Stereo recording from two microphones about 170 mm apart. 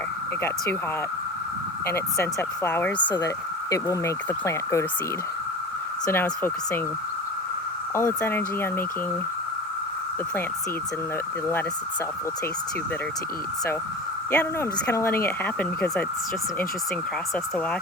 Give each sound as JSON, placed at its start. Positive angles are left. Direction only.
{"t": 2.6, "sound": "speech", "side_deg": 10}
{"t": 6.1, "sound": "speech", "side_deg": 15}
{"t": 7.9, "sound": "speech", "side_deg": 15}
{"t": 14.3, "sound": "speech", "side_deg": 15}